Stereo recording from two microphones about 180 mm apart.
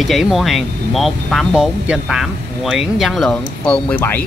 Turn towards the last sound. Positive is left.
turn(degrees=10)  # may be behind; listen again after turning